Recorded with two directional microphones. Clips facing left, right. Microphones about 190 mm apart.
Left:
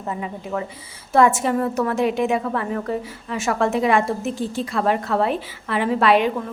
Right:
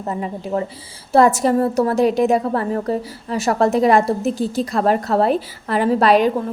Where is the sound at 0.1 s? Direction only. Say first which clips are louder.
Right 4 dB; 40° right (ahead or behind).